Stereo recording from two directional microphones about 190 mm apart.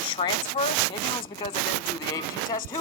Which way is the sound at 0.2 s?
35° left (ahead or behind).